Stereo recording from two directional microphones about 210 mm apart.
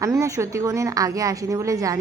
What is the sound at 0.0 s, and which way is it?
A woman's voice, 15° right (ahead or behind).